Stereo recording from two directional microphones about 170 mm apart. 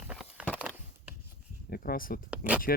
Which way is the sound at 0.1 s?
5° right (ahead or behind).